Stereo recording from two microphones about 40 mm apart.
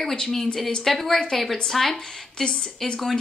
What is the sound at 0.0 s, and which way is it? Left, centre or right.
Speech, centre.